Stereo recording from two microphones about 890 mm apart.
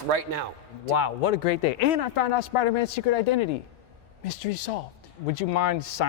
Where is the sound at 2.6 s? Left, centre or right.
Left.